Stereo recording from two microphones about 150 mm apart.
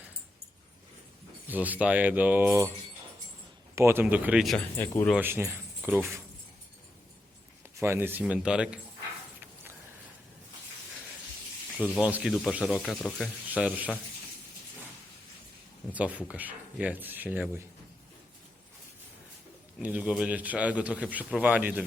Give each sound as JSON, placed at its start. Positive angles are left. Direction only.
{"t": 1.5, "sound": "a man's voice", "side_deg": -10}
{"t": 3.8, "sound": "a man's voice", "side_deg": -20}
{"t": 5.2, "sound": "speech", "side_deg": -15}
{"t": 7.8, "sound": "a man's voice", "side_deg": -15}
{"t": 11.9, "sound": "a man's voice", "side_deg": -5}
{"t": 13.5, "sound": "a man's voice", "side_deg": -10}
{"t": 15.9, "sound": "a man's voice", "side_deg": -10}
{"t": 19.8, "sound": "a man's voice", "side_deg": -10}